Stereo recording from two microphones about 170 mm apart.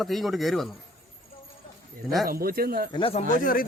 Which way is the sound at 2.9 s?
35° left (ahead or behind).